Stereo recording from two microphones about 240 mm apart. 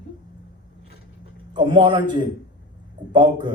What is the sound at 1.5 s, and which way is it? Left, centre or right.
A man's voice, centre.